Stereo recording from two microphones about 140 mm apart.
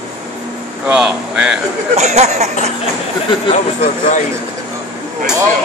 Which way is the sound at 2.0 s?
55° right (ahead or behind).